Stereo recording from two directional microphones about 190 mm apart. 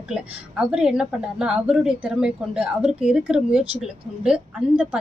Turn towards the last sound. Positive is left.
turn(degrees=-5)  # may be behind; listen again after turning